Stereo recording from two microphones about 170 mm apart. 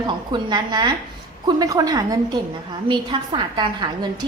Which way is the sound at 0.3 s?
25° right (ahead or behind).